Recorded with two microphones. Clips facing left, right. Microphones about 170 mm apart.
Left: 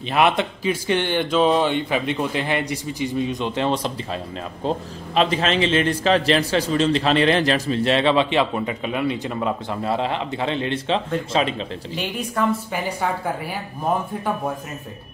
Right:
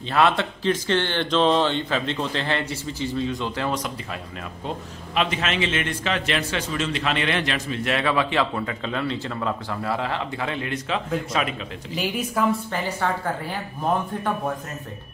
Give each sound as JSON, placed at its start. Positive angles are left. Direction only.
{"t": 0.0, "sound": "a man's voice", "side_deg": 15}
{"t": 11.9, "sound": "speech", "side_deg": 0}
{"t": 12.7, "sound": "speech", "side_deg": 10}